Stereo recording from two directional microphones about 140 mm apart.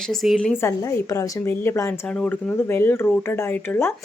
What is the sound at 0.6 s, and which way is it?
Speech, 20° left (ahead or behind).